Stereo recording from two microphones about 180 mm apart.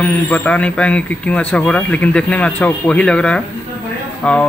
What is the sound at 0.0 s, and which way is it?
Speech, 5° left (ahead or behind).